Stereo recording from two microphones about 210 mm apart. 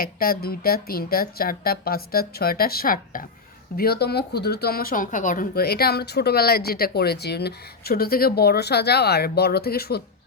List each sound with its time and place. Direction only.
0.0 s speech: 45° left (ahead or behind)